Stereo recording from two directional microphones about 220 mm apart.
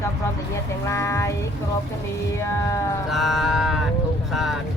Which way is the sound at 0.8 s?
15° left (ahead or behind).